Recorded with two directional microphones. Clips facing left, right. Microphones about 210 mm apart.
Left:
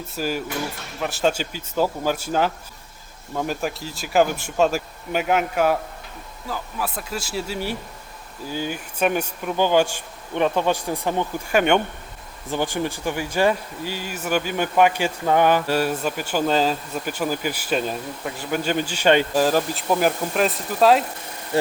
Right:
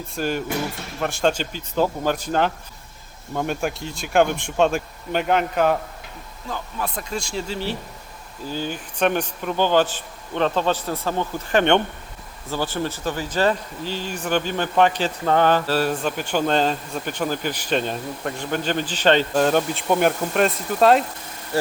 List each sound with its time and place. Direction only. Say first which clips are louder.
0.2 s speech: right 2 dB; 5° left (ahead or behind)
21.5 s speech: left 2 dB; 20° left (ahead or behind)